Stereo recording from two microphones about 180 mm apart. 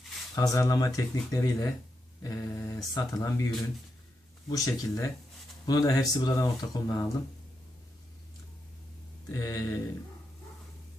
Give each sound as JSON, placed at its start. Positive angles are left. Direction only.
{"t": 0.3, "sound": "speech", "side_deg": 20}
{"t": 4.4, "sound": "speech", "side_deg": 20}
{"t": 9.3, "sound": "speech", "side_deg": 20}